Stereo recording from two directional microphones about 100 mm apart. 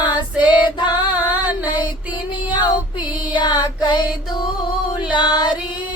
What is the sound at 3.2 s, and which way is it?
Music, 45° left (ahead or behind).